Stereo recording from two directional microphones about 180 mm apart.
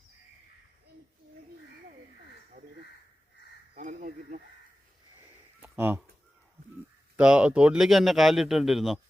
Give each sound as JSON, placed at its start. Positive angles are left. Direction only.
{"t": 3.8, "sound": "speech", "side_deg": -45}
{"t": 5.6, "sound": "speech", "side_deg": -10}
{"t": 7.2, "sound": "speech", "side_deg": -5}